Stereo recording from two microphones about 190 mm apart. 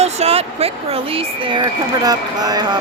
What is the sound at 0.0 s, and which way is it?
Speech, 35° right (ahead or behind).